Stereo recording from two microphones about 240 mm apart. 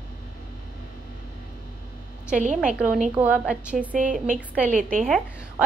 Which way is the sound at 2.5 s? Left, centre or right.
Centre.